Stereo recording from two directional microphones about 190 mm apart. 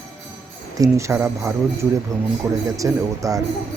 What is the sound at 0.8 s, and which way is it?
Speech, 15° right (ahead or behind).